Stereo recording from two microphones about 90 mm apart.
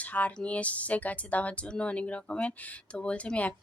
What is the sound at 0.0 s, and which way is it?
Speech, 15° left (ahead or behind).